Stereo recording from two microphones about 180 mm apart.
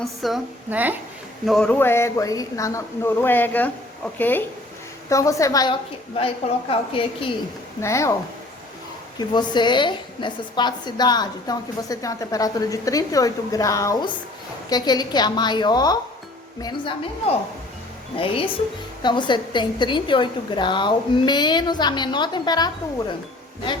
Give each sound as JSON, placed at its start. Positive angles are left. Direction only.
{"t": 0.0, "sound": "a woman's voice", "side_deg": 0}
{"t": 1.5, "sound": "speech", "side_deg": 5}
{"t": 6.1, "sound": "a woman's voice", "side_deg": 30}
{"t": 7.8, "sound": "speech", "side_deg": 15}
{"t": 9.1, "sound": "a woman's voice", "side_deg": 25}